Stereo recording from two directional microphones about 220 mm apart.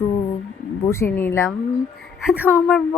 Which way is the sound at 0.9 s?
10° left (ahead or behind).